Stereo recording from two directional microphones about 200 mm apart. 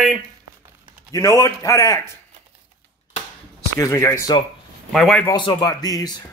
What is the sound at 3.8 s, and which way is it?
Speech, 15° left (ahead or behind).